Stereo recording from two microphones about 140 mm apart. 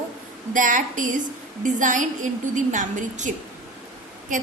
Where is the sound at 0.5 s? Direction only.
70° right (ahead or behind).